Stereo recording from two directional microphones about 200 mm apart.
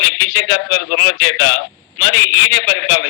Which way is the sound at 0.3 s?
60° left (ahead or behind).